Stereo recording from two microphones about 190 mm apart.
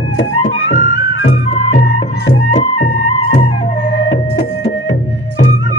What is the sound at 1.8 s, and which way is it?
Music, 65° left (ahead or behind).